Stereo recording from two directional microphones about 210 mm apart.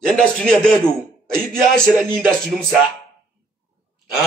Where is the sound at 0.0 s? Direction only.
5° left (ahead or behind).